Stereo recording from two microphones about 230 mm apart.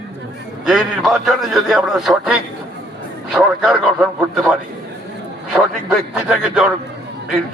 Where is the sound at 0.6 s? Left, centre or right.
Centre.